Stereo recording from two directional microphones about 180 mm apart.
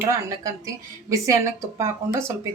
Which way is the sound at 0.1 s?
20° right (ahead or behind).